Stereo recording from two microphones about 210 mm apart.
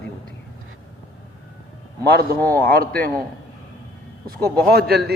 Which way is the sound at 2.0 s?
50° right (ahead or behind).